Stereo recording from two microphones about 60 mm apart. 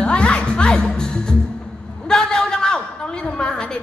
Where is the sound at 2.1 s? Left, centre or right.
Centre.